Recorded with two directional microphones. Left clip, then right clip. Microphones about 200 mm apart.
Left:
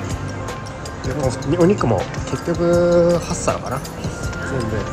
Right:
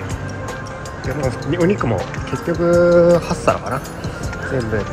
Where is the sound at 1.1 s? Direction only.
Centre (ahead or behind).